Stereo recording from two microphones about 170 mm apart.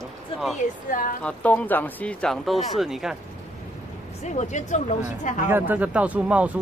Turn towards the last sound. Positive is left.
turn(degrees=-10)  # may be behind; listen again after turning